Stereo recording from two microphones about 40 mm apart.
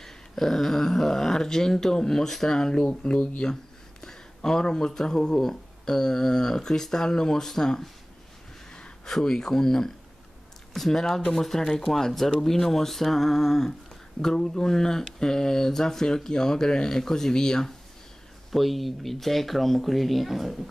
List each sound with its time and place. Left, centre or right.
0.0 s speech: centre; by 3.4 s left
4.0 s speech: centre
9.0 s speech: centre
18.5 s speech: centre